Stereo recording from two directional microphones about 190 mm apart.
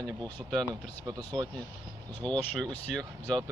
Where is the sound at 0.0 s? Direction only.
Centre (ahead or behind).